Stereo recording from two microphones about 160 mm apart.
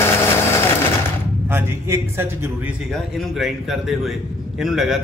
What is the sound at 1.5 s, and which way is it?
A man's voice, 15° right (ahead or behind).